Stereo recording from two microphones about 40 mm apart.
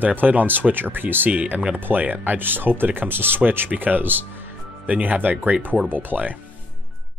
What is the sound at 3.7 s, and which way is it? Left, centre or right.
Speech, right.